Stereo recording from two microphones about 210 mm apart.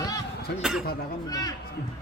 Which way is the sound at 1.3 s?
15° left (ahead or behind).